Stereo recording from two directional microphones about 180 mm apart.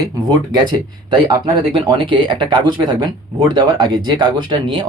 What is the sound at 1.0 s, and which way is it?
Speech, 25° right (ahead or behind).